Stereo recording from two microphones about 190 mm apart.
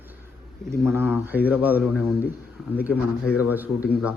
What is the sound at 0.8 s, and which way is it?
A man's voice, 10° right (ahead or behind).